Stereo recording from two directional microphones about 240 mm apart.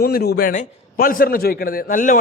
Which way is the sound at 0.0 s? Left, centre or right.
Left.